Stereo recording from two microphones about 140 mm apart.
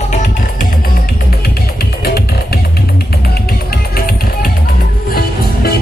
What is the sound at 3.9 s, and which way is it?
Music, 90° left.